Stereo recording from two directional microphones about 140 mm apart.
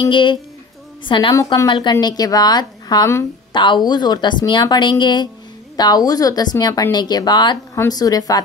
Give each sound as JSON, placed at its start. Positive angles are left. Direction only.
{"t": 0.1, "sound": "a woman's voice", "side_deg": 35}
{"t": 1.3, "sound": "speech", "side_deg": 20}
{"t": 1.7, "sound": "a woman's voice", "side_deg": 35}